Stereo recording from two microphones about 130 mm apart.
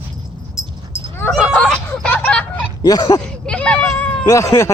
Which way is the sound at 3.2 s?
5° left (ahead or behind).